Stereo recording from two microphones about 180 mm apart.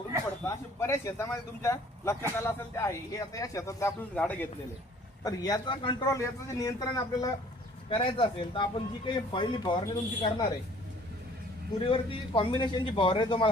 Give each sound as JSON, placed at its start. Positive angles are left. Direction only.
{"t": 0.4, "sound": "speech", "side_deg": 15}
{"t": 5.2, "sound": "speech", "side_deg": 20}
{"t": 11.8, "sound": "speech", "side_deg": 30}